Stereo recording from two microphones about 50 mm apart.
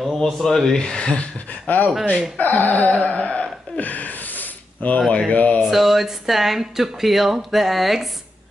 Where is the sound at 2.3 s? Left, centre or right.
Left.